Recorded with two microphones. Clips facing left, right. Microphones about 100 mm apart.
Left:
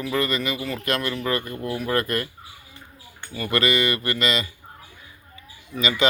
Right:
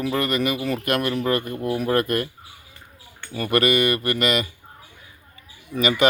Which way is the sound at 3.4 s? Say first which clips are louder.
Right 3 dB; 55° right (ahead or behind).